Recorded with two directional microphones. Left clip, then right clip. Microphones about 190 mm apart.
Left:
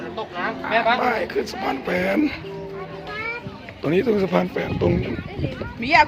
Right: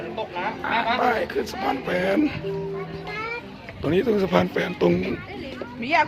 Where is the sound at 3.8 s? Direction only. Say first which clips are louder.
Left 2 dB; 5° left (ahead or behind).